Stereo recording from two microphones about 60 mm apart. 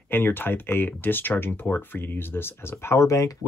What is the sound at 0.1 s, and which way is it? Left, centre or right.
Speech, left.